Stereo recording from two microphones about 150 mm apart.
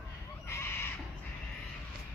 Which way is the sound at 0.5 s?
15° left (ahead or behind).